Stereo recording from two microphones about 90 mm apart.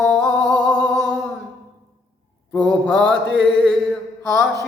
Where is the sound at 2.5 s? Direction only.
10° left (ahead or behind).